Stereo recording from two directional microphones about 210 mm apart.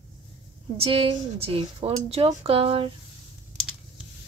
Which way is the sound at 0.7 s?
25° right (ahead or behind).